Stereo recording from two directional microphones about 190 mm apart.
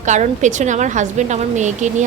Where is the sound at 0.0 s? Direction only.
40° right (ahead or behind).